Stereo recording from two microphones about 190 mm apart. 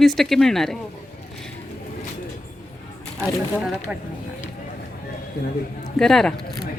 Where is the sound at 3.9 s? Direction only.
5° right (ahead or behind).